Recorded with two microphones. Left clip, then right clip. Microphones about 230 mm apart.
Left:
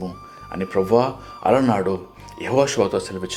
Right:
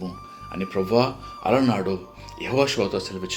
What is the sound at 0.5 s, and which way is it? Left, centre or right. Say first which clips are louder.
Speech: left 4 dB; centre.